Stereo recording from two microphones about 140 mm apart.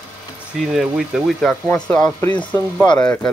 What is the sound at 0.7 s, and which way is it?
Speech, centre (ahead or behind).